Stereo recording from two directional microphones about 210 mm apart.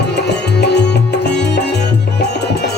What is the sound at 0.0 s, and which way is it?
Music, 55° left (ahead or behind).